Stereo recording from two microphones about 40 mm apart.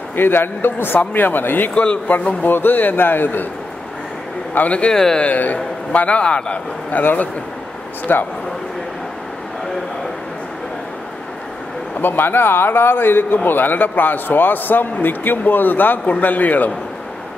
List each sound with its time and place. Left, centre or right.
0.1 s a man's voice: left
0.9 s a man's voice: left
4.6 s a man's voice: left
4.9 s speech: centre
5.2 s a man's voice: left
6.9 s a man's voice: left
8.1 s a man's voice: left
12.0 s a man's voice: left
13.5 s a man's voice: left